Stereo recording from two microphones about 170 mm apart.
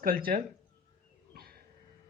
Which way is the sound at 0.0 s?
60° right (ahead or behind).